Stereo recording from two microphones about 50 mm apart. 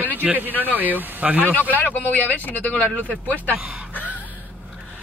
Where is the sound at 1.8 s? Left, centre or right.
Left.